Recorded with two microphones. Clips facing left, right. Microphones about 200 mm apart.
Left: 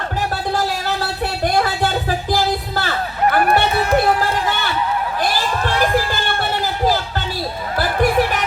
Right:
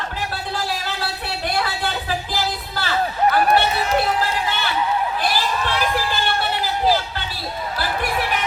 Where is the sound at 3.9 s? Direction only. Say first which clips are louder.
Left 4 dB; 50° left (ahead or behind).